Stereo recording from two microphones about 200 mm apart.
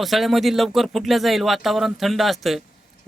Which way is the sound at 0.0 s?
Centre (ahead or behind).